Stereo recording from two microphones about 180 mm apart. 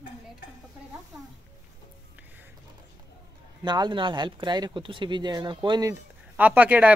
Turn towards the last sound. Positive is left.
turn(degrees=-10)  # may be behind; listen again after turning